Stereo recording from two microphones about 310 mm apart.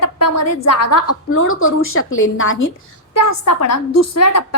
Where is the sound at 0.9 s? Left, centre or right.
Left.